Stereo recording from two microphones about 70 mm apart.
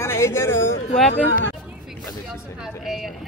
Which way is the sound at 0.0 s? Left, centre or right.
Left.